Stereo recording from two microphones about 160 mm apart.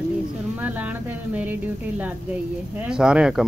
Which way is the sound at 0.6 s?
10° right (ahead or behind).